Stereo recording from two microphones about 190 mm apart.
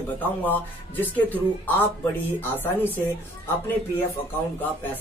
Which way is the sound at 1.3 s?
10° left (ahead or behind).